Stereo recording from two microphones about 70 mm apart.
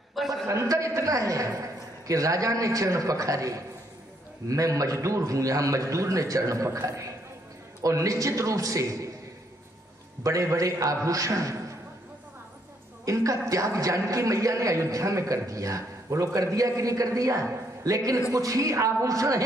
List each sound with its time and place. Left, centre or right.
0.2 s a sound: centre
0.5 s a man's voice: right
10.2 s a man's voice: right
13.0 s a man's voice: right